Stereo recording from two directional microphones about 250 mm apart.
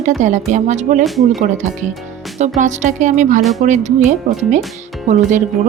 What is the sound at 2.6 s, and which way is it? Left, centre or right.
Speech, right.